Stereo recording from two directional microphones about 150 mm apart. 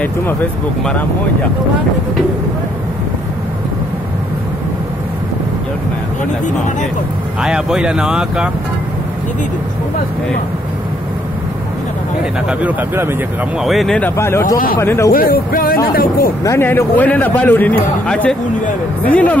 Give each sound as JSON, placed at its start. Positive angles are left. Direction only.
{"t": 6.4, "sound": "speech", "side_deg": 55}
{"t": 7.4, "sound": "speech", "side_deg": -5}
{"t": 12.4, "sound": "speech", "side_deg": -10}
{"t": 13.7, "sound": "a man's voice", "side_deg": 0}
{"t": 15.0, "sound": "speech", "side_deg": 85}
{"t": 16.4, "sound": "a man's voice", "side_deg": 15}